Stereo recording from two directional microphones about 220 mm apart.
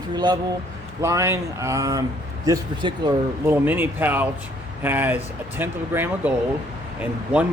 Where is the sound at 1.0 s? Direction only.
15° right (ahead or behind).